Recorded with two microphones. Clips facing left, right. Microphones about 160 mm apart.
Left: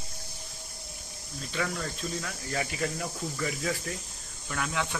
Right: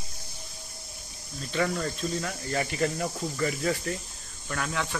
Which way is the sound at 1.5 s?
Centre (ahead or behind).